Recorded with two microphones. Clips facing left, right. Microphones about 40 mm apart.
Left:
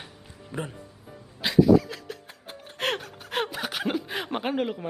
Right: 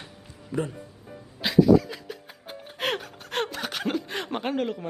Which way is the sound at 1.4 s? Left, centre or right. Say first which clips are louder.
Even; centre.